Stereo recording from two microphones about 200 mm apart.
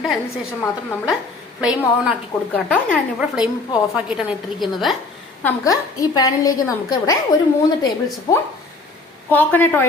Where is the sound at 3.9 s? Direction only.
5° right (ahead or behind).